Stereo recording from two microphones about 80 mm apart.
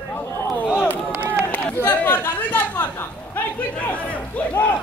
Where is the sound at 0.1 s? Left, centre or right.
Left.